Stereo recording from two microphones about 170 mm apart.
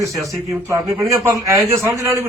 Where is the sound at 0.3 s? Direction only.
20° right (ahead or behind).